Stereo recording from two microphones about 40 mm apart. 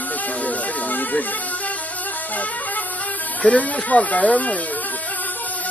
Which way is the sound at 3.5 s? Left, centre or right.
Left.